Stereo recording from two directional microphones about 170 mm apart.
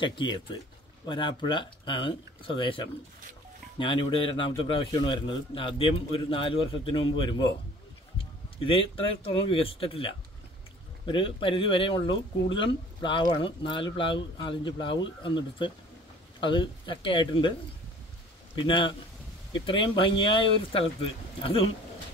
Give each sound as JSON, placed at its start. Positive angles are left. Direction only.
{"t": 0.0, "sound": "a man's voice", "side_deg": 30}
{"t": 8.5, "sound": "a man's voice", "side_deg": 30}
{"t": 18.6, "sound": "a man's voice", "side_deg": 30}